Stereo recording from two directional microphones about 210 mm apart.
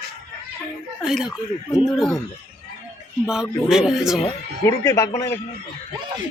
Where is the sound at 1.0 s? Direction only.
Centre (ahead or behind).